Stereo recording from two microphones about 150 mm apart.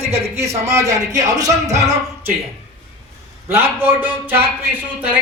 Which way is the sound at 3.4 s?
15° right (ahead or behind).